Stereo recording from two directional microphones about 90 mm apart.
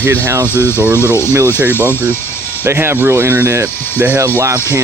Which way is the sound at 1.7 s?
25° left (ahead or behind).